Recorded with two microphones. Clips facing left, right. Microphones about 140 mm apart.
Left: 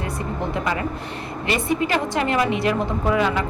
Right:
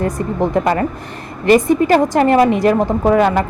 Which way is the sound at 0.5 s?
50° right (ahead or behind).